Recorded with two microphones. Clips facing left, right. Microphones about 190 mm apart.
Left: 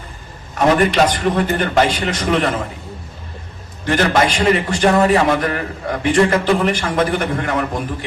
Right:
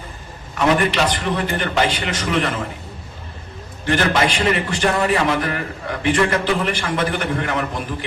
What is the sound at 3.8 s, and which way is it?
Speech, 45° left (ahead or behind).